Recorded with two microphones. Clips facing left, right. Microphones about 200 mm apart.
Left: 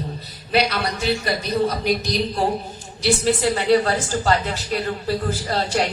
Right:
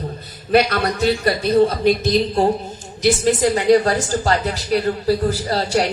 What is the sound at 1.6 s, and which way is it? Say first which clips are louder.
Speech: right 5 dB; 25° right (ahead or behind).